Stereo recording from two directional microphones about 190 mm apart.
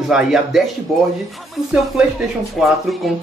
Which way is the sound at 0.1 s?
Centre (ahead or behind).